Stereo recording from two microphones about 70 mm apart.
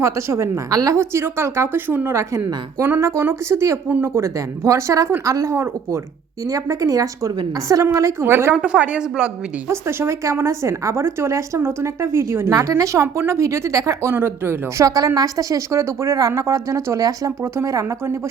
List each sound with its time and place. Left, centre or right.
0.0 s a woman's voice: right
0.7 s a woman's voice: right
0.9 s a woman's voice: right
8.2 s a woman's voice: right
8.5 s a woman's voice: centre
9.6 s a woman's voice: right
14.1 s a woman's voice: right
14.8 s a woman's voice: right
17.4 s a woman's voice: right